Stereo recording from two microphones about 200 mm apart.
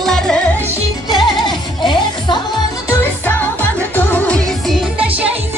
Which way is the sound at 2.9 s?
10° left (ahead or behind).